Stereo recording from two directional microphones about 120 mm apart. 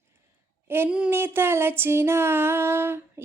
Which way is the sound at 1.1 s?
20° right (ahead or behind).